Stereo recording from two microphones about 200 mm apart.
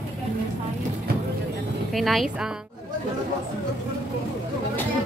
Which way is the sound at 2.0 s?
Centre (ahead or behind).